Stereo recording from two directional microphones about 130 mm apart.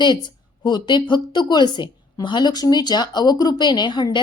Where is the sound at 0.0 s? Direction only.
35° left (ahead or behind).